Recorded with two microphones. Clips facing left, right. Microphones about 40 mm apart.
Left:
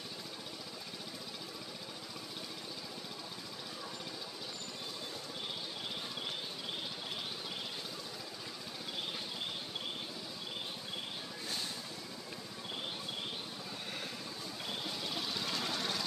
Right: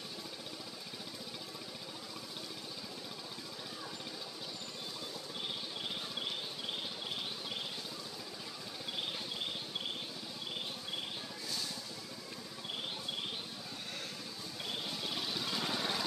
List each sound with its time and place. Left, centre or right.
14.7 s vehicle: centre